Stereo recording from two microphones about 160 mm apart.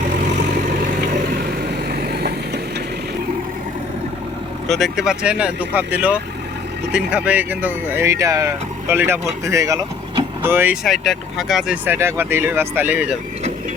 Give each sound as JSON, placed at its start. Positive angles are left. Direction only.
{"t": 1.3, "sound": "vehicle", "side_deg": -70}
{"t": 4.7, "sound": "speech", "side_deg": 0}
{"t": 10.8, "sound": "speech", "side_deg": 0}
{"t": 11.9, "sound": "speech", "side_deg": -15}